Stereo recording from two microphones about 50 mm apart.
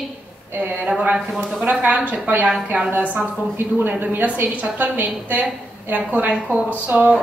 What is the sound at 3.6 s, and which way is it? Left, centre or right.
A woman's voice, right.